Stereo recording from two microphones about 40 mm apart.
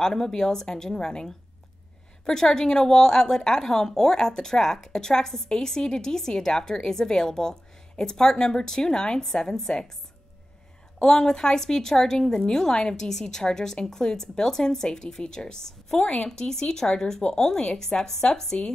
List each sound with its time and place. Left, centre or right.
0.0 s a woman's voice: centre
11.0 s a woman's voice: centre